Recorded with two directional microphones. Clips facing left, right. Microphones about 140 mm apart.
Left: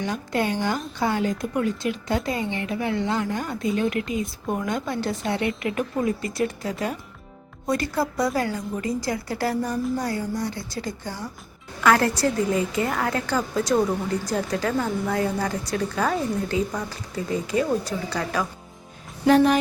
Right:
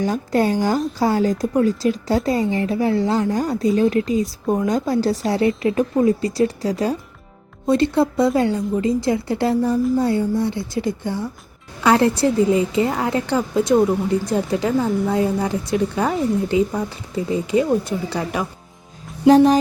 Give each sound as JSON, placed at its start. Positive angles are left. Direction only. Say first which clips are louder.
{"t": 0.0, "sound": "a woman's voice", "louder": "right 6 dB", "side_deg": -40}